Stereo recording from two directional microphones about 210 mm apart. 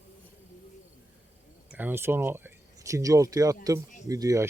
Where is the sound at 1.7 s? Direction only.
10° right (ahead or behind).